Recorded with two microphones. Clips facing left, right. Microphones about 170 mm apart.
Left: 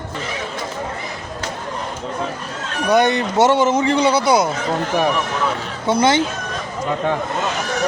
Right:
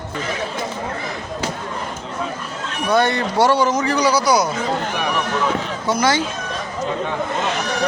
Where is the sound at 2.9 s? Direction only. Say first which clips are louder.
Left 2 dB; 20° left (ahead or behind).